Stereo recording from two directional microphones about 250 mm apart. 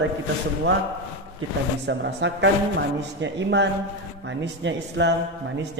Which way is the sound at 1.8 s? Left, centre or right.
Right.